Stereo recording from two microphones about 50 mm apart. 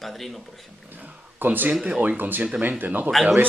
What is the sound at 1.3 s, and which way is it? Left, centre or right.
Speech, right.